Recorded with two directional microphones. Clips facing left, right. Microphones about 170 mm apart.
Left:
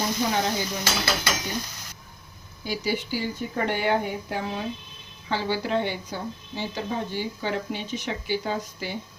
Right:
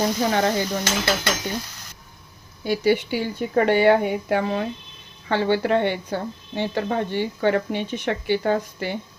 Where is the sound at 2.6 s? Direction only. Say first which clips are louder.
Right 8 dB; 60° right (ahead or behind).